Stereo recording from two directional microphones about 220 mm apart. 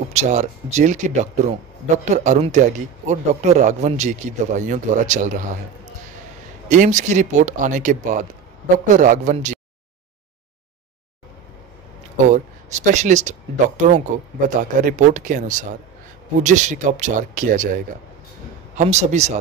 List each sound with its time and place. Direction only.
0.1 s speech: 30° right (ahead or behind)
6.7 s speech: 35° right (ahead or behind)
12.3 s speech: 35° right (ahead or behind)
18.8 s speech: 30° right (ahead or behind)